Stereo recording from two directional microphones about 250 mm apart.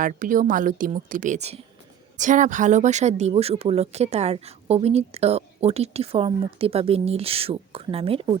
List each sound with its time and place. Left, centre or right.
0.0 s a woman's voice: right